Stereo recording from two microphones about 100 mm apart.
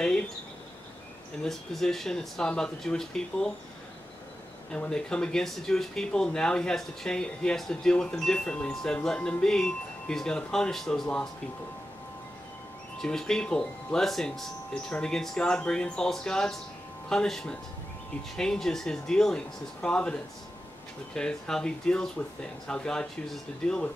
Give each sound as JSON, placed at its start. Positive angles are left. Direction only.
{"t": 1.4, "sound": "speech", "side_deg": 5}
{"t": 4.7, "sound": "speech", "side_deg": 10}
{"t": 13.0, "sound": "speech", "side_deg": 5}